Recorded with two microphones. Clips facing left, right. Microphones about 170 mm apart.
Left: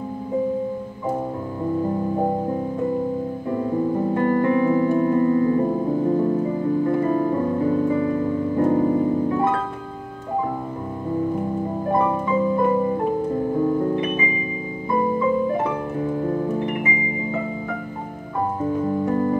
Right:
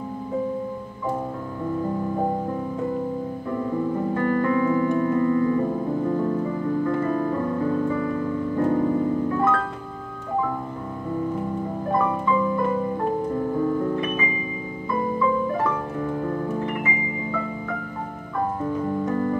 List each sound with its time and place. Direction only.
3.4 s music: 25° left (ahead or behind)
11.9 s music: 20° left (ahead or behind)
13.7 s music: 25° left (ahead or behind)
18.6 s keyboard: 30° left (ahead or behind)